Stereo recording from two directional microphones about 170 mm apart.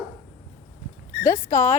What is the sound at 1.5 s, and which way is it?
Speech, 15° left (ahead or behind).